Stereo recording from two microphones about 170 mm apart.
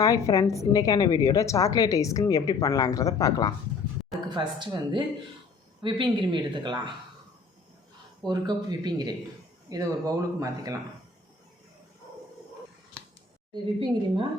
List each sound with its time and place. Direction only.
0.0 s a woman's voice: 20° left (ahead or behind)
4.4 s speech: 30° right (ahead or behind)
8.2 s speech: 25° right (ahead or behind)
13.5 s speech: 30° right (ahead or behind)